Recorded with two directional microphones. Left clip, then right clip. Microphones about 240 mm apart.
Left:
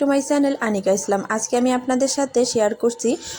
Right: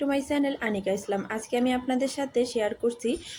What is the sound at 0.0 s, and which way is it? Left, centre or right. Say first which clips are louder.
A woman's voice: left 8 dB; centre.